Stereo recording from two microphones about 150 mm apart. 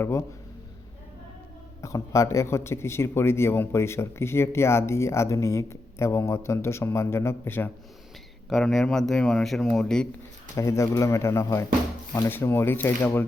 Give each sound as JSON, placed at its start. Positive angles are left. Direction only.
{"t": 1.8, "sound": "speech", "side_deg": 20}
{"t": 8.4, "sound": "speech", "side_deg": 0}
{"t": 10.5, "sound": "speech", "side_deg": 20}